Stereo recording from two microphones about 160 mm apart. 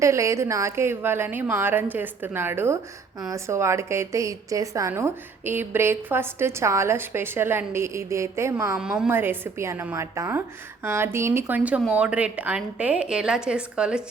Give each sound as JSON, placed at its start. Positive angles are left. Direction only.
{"t": 0.0, "sound": "a woman's voice", "side_deg": -20}
{"t": 8.8, "sound": "a woman's voice", "side_deg": -5}